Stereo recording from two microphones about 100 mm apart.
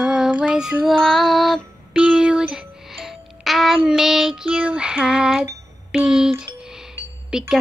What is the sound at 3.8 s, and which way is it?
Child singing, 5° right (ahead or behind).